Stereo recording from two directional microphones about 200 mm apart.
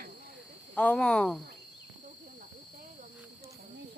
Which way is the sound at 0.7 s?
5° left (ahead or behind).